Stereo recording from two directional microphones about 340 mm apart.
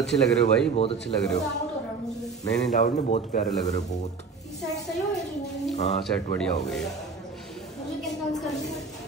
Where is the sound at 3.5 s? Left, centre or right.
Centre.